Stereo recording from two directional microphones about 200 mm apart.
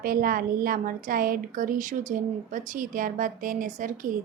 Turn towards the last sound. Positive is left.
turn(degrees=-40)  # may be behind; listen again after turning